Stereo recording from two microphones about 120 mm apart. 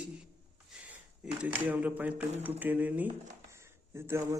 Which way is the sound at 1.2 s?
10° right (ahead or behind).